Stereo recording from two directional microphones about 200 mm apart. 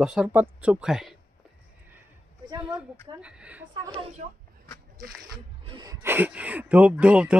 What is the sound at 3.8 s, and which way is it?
Speech, 30° right (ahead or behind).